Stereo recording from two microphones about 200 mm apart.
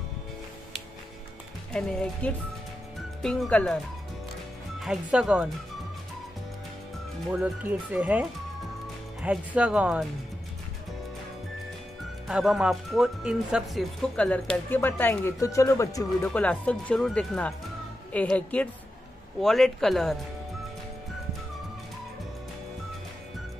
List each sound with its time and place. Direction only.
1.7 s speech: 5° left (ahead or behind)
7.2 s speech: centre (ahead or behind)
12.3 s speech: centre (ahead or behind)